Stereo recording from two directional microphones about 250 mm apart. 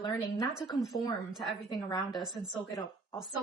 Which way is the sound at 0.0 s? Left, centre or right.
Centre.